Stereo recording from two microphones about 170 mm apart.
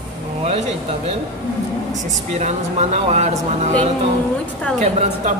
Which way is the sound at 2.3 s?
40° right (ahead or behind).